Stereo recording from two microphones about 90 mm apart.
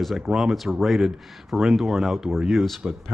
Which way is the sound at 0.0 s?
5° right (ahead or behind).